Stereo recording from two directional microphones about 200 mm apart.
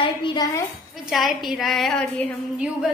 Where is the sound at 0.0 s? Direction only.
25° left (ahead or behind).